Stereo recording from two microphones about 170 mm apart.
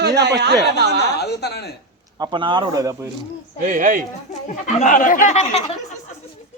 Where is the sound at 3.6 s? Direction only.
50° right (ahead or behind).